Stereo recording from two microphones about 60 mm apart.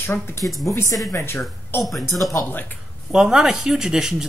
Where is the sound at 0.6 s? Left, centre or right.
Left.